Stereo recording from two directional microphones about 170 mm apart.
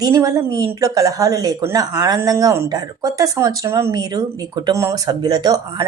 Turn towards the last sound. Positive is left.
turn(degrees=-25)  # may be behind; listen again after turning